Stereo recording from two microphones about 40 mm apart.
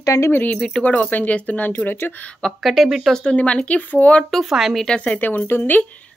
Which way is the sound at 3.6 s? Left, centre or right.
Left.